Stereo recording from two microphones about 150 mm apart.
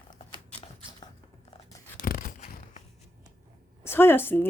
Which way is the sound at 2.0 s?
70° left (ahead or behind).